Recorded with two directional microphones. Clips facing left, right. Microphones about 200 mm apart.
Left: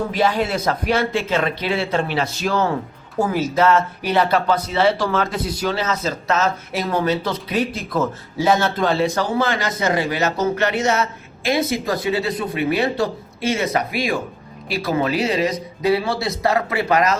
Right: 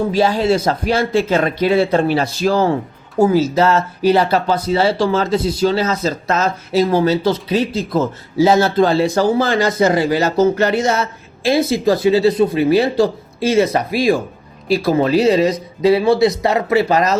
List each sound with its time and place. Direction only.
0.1 s speech: 30° right (ahead or behind)